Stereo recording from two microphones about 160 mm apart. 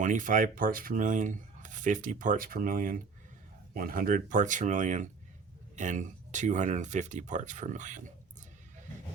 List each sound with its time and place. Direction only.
0.0 s speech: 55° right (ahead or behind)